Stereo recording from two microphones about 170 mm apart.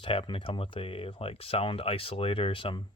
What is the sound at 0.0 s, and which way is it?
Speech, 30° left (ahead or behind).